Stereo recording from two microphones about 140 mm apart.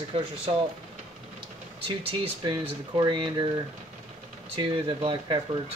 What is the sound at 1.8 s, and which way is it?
Speech, 35° right (ahead or behind).